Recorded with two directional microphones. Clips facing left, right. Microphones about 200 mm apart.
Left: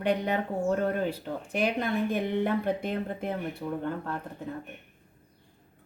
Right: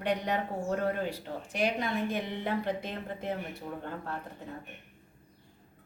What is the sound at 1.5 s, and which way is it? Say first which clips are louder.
A woman's voice: left 3 dB; 55° left (ahead or behind).